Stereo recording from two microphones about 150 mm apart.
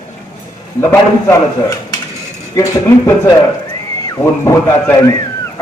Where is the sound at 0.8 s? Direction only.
15° left (ahead or behind).